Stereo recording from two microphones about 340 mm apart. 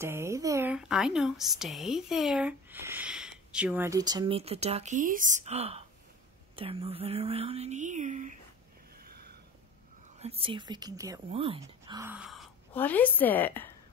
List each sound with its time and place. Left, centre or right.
0.0 s speech: centre
9.0 s a sound: right
10.1 s speech: centre